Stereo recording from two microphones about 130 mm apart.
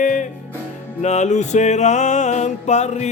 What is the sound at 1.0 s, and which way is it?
Music, 60° left (ahead or behind).